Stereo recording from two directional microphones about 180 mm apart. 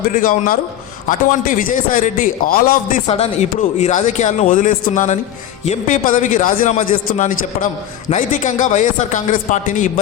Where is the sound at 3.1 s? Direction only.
35° left (ahead or behind).